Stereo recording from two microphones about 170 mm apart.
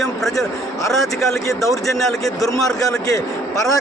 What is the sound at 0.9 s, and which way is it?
A man's voice, centre (ahead or behind).